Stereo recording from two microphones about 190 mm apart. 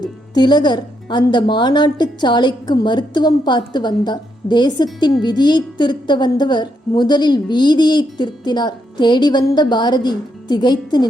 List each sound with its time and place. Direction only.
0.0 s a woman's voice: 20° left (ahead or behind)